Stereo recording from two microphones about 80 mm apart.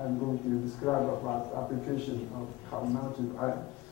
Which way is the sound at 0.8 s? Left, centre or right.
Left.